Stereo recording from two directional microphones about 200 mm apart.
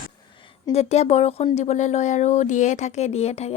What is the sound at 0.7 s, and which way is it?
Speech, 30° left (ahead or behind).